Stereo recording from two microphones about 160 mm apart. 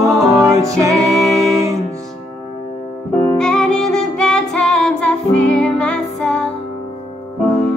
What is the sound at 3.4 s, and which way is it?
Music, 5° left (ahead or behind).